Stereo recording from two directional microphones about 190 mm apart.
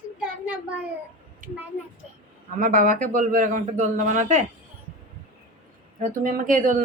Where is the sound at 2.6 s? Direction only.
45° right (ahead or behind).